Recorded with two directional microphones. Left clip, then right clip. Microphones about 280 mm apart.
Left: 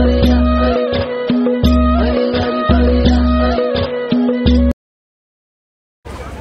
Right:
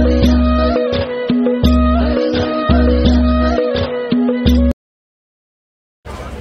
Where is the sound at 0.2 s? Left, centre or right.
Centre.